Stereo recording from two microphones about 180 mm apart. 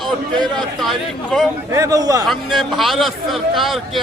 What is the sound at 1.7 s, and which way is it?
Speech, 20° right (ahead or behind).